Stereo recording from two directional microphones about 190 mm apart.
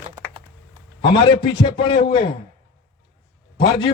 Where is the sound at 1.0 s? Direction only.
25° left (ahead or behind).